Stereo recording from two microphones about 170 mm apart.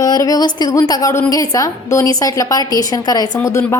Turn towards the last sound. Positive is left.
turn(degrees=15)  # may be behind; listen again after turning